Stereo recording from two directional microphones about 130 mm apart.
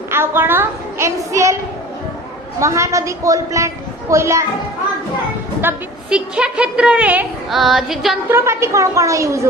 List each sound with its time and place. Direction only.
0.1 s a woman's voice: 15° right (ahead or behind)
2.6 s a woman's voice: 25° right (ahead or behind)
5.6 s a woman's voice: 5° right (ahead or behind)
7.5 s female singing: centre (ahead or behind)
8.3 s a woman's voice: 20° right (ahead or behind)